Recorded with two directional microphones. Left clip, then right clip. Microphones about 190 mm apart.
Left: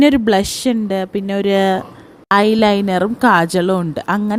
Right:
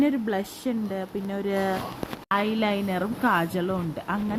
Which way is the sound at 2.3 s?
55° left (ahead or behind).